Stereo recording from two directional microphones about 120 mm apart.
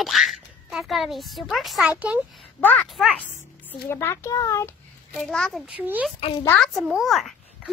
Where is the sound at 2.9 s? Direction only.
5° left (ahead or behind).